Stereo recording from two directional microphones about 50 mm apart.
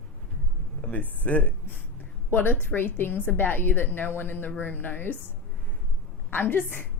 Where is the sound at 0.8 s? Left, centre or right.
Left.